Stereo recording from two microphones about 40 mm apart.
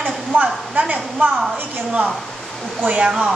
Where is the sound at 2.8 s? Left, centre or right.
Right.